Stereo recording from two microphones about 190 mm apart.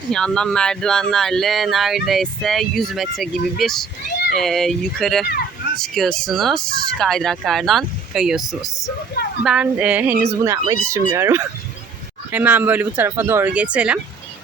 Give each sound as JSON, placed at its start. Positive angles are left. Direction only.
{"t": 0.1, "sound": "speech", "side_deg": 5}